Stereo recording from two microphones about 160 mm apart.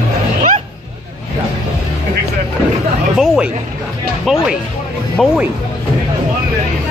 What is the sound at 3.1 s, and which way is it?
Speech, 5° right (ahead or behind).